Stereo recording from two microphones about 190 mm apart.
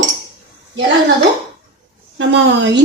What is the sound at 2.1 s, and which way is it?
Speech, 70° right (ahead or behind).